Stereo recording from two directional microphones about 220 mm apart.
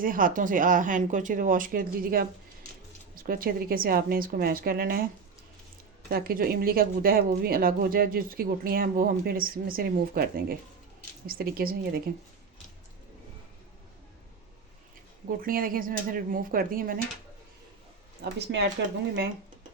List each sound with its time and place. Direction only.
0.0 s speech: 40° right (ahead or behind)
6.1 s a woman's voice: 40° right (ahead or behind)
15.4 s speech: 40° right (ahead or behind)
18.2 s a woman's voice: 50° right (ahead or behind)